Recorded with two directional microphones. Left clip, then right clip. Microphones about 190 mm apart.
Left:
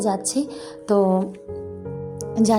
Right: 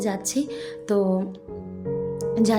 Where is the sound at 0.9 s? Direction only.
15° left (ahead or behind).